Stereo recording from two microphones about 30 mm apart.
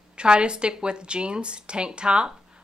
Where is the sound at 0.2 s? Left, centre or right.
Right.